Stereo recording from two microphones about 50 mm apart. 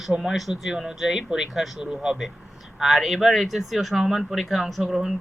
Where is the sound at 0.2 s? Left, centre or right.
Centre.